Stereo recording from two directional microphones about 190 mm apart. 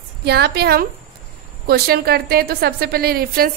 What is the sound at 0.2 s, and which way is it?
A woman's voice, 60° right (ahead or behind).